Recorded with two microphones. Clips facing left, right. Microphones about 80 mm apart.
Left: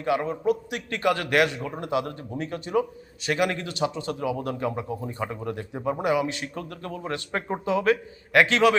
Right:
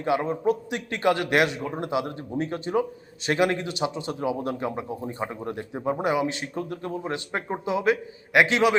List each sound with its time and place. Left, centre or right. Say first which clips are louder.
0.0 s a man's voice: right 1 dB; right